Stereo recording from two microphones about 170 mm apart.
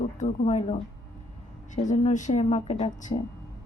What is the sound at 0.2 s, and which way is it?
A woman's voice, 45° left (ahead or behind).